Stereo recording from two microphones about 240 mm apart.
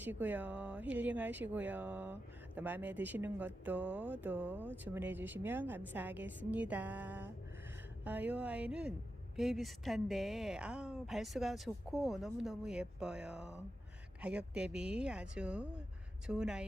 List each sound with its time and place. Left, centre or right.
0.0 s a woman's voice: centre